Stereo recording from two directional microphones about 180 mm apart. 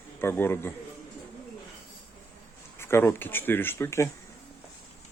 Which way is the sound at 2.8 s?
15° left (ahead or behind).